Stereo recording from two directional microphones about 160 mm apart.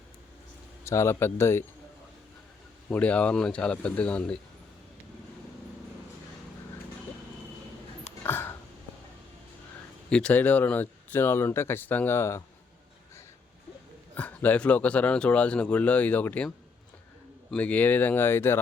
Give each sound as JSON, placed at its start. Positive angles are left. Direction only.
{"t": 0.9, "sound": "speech", "side_deg": 15}
{"t": 2.9, "sound": "speech", "side_deg": 10}
{"t": 8.2, "sound": "a sound", "side_deg": 15}
{"t": 10.1, "sound": "speech", "side_deg": 5}
{"t": 14.2, "sound": "speech", "side_deg": 10}
{"t": 17.5, "sound": "speech", "side_deg": 10}